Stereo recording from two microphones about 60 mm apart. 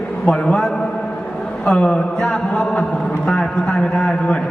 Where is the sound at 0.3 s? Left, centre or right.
Centre.